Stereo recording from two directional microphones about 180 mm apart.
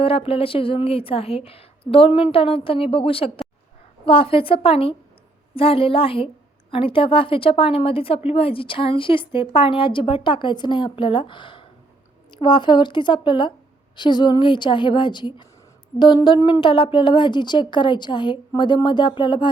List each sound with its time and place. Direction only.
0.0 s a woman's voice: 30° left (ahead or behind)